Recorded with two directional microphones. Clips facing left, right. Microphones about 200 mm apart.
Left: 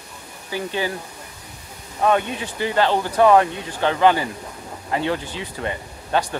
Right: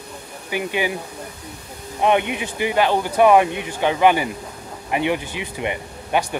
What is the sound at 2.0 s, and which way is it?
Speech, 20° right (ahead or behind).